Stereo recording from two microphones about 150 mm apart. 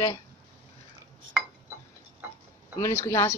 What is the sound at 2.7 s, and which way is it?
Speech, 20° left (ahead or behind).